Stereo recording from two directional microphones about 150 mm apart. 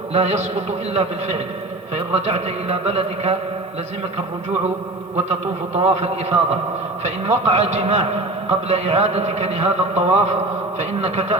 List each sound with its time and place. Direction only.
0.1 s a man's voice: 45° right (ahead or behind)
5.7 s a man's voice: 45° right (ahead or behind)